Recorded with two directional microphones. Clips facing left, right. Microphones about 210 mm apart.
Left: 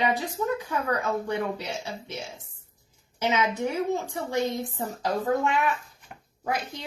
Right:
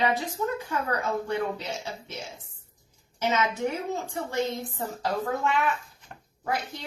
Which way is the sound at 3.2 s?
15° left (ahead or behind).